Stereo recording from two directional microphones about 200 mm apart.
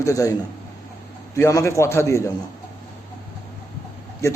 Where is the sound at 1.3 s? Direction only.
15° left (ahead or behind).